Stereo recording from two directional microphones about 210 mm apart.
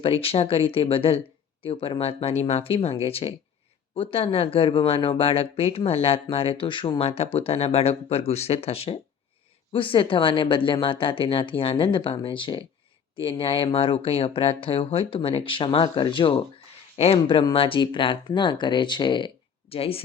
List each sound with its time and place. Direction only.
0.0 s speech: 25° left (ahead or behind)